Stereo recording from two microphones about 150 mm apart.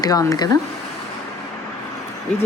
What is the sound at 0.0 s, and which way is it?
Speech, 25° left (ahead or behind).